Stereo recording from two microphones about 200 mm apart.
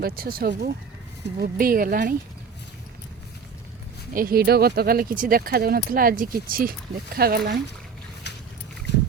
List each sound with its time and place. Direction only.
0.0 s speech: 50° right (ahead or behind)
4.1 s speech: 45° right (ahead or behind)